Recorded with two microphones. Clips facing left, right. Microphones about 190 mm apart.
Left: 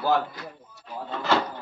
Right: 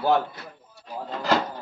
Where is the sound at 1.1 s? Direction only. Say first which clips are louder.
Right 1 dB; 40° right (ahead or behind).